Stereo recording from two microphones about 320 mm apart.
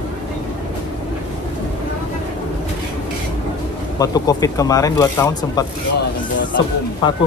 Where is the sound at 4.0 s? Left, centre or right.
Centre.